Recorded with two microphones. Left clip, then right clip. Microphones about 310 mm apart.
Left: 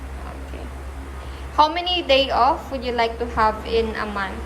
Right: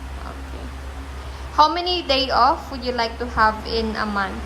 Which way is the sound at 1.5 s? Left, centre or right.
Right.